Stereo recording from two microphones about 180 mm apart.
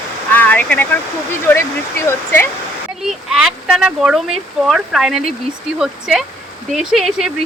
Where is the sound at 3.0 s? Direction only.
Centre (ahead or behind).